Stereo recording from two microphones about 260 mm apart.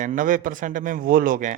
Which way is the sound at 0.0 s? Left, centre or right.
Right.